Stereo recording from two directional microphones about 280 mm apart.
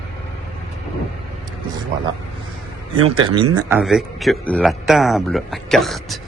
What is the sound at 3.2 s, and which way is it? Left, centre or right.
A man's voice, centre.